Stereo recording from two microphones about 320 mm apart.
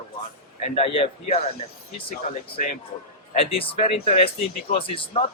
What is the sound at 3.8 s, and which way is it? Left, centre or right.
Speech, centre.